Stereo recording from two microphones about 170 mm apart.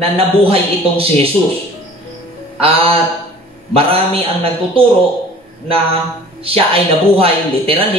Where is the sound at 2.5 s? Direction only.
35° right (ahead or behind).